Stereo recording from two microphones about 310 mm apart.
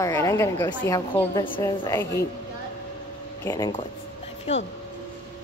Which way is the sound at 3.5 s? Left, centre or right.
Centre.